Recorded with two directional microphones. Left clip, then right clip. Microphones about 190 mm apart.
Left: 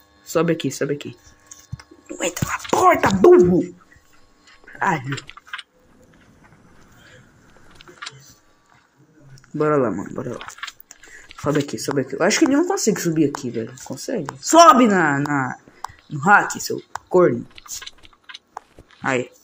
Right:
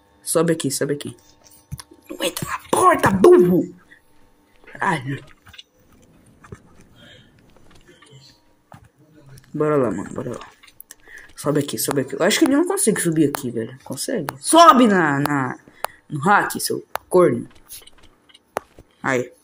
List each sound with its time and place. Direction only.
0.3 s speech: 5° right (ahead or behind)
1.8 s whispering: centre (ahead or behind)
2.7 s speech: centre (ahead or behind)
4.7 s speech: centre (ahead or behind)
9.3 s speech: centre (ahead or behind)
18.6 s a sound: centre (ahead or behind)